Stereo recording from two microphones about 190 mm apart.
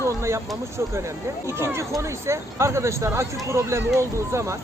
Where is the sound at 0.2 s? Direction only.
15° right (ahead or behind).